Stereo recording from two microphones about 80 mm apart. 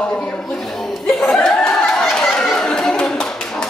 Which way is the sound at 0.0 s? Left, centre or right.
Centre.